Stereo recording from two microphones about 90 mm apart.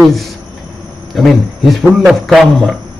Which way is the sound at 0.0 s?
Centre (ahead or behind).